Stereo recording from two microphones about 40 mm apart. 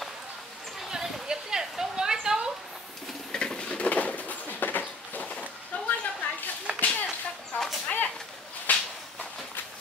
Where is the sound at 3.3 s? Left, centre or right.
Left.